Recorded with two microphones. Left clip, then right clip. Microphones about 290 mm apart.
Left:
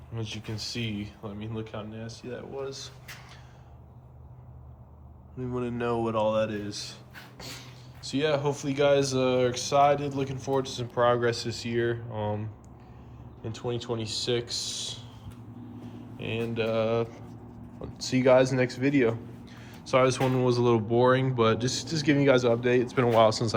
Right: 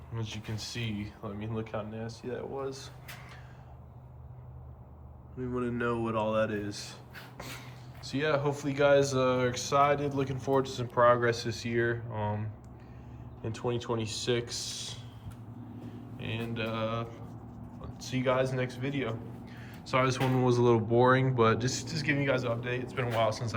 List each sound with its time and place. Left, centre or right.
0.1 s speech: centre
5.4 s speech: centre
16.1 s speech: centre